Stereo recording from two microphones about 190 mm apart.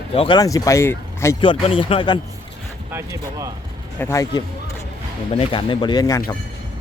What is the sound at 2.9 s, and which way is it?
Speech, 15° right (ahead or behind).